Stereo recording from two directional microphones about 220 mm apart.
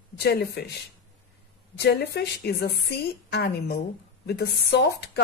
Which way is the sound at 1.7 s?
50° left (ahead or behind).